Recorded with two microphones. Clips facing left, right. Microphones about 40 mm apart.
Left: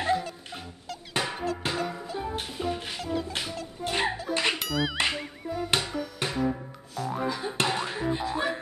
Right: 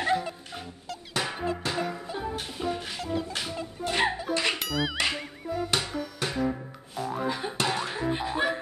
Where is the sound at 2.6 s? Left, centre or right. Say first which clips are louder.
Right 1 dB; centre.